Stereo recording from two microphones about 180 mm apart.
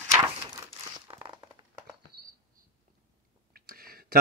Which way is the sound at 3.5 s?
55° right (ahead or behind).